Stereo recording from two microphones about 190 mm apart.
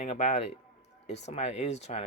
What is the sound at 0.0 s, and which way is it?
Speech, 40° left (ahead or behind).